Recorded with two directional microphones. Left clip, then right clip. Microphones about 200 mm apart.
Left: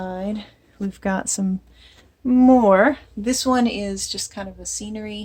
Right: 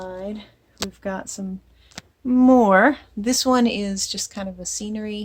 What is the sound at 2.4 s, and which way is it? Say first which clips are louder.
Speech: even; 30° right (ahead or behind).